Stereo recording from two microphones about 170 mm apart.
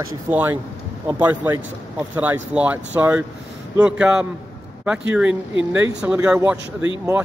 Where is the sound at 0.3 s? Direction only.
10° right (ahead or behind).